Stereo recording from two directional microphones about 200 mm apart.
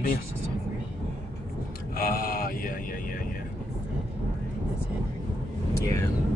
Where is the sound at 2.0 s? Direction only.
45° left (ahead or behind).